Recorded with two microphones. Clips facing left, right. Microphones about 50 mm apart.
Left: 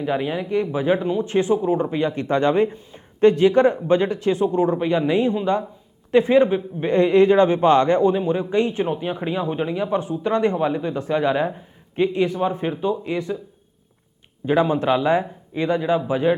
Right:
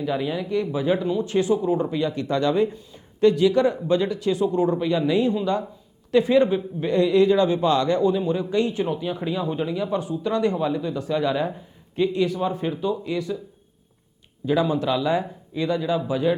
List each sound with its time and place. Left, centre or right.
0.0 s a man's voice: left
14.4 s speech: left